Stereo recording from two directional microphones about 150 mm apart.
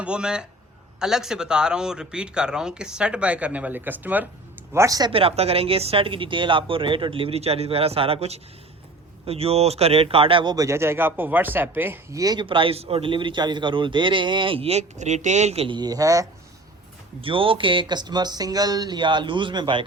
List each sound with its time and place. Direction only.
0.0 s speech: 5° right (ahead or behind); by 5.1 s 25° right (ahead or behind)
5.1 s a man's voice: 40° right (ahead or behind); by 12.2 s 15° right (ahead or behind)
12.2 s a man's voice: 30° right (ahead or behind)
17.2 s a man's voice: 35° right (ahead or behind)